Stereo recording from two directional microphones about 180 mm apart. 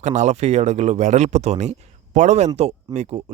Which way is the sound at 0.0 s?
40° right (ahead or behind).